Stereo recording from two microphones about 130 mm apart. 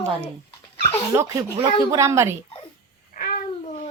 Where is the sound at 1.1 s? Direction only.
25° right (ahead or behind).